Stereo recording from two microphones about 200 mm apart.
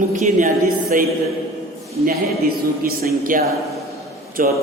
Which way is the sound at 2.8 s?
45° right (ahead or behind).